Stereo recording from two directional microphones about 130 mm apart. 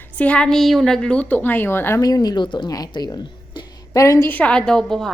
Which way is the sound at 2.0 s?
30° left (ahead or behind).